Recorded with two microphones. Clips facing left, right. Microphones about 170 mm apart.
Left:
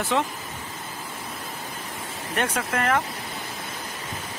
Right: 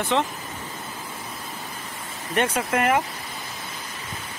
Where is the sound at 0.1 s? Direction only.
5° left (ahead or behind).